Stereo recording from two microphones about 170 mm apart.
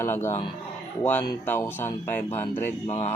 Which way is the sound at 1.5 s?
15° left (ahead or behind).